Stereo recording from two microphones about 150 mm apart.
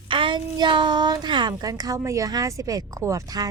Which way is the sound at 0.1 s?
35° right (ahead or behind).